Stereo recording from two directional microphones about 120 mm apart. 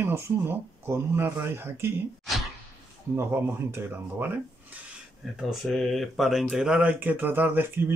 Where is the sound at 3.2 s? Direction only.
20° right (ahead or behind).